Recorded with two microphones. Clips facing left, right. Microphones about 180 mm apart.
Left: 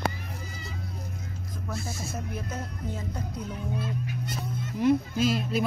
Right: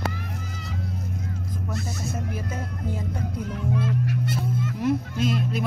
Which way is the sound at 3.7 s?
75° right (ahead or behind).